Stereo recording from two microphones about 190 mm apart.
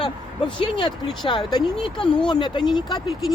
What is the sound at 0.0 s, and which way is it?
Speech, 25° left (ahead or behind).